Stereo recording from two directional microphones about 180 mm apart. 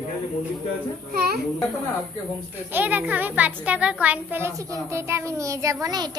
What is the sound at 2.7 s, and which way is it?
A child's voice, 10° right (ahead or behind).